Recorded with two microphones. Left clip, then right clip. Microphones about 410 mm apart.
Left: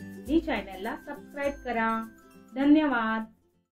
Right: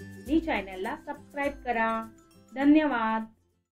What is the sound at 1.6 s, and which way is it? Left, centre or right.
Speech, right.